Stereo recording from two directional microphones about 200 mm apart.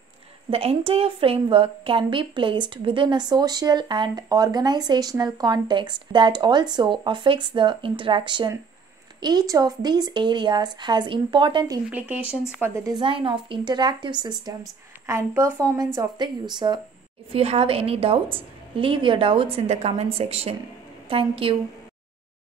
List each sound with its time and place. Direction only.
0.5 s a woman's voice: 30° right (ahead or behind)
12.4 s a woman's voice: 10° right (ahead or behind); by 21.5 s 25° right (ahead or behind)